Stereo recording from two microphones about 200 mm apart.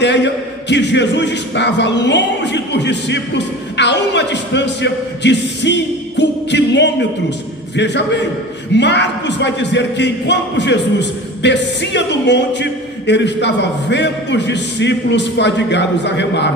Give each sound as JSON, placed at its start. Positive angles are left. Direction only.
{"t": 0.0, "sound": "speech", "side_deg": 60}